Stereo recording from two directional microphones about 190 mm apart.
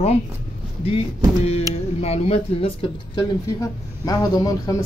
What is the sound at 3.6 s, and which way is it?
Speech, 20° left (ahead or behind).